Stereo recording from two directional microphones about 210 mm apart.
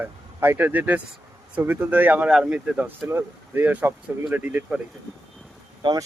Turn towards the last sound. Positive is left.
turn(degrees=-20)  # may be behind; listen again after turning